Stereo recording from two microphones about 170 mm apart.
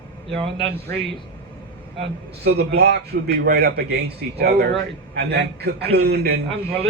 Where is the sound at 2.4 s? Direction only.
70° right (ahead or behind).